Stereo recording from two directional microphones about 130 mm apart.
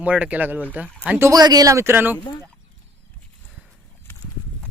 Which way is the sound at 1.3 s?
30° right (ahead or behind).